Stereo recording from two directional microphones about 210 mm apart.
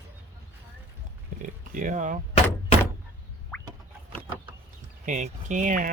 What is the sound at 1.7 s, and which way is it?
Speech, 35° right (ahead or behind).